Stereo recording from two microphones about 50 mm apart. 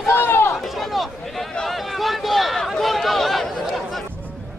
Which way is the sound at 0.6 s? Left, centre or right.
Centre.